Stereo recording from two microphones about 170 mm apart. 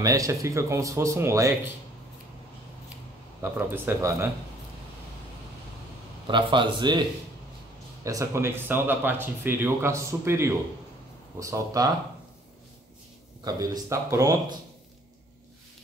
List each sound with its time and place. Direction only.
0.0 s speech: 20° right (ahead or behind)
3.5 s speech: 15° right (ahead or behind)
6.2 s speech: 30° right (ahead or behind)
13.4 s speech: 20° right (ahead or behind)